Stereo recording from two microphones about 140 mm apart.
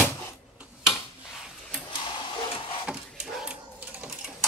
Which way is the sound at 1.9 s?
40° left (ahead or behind).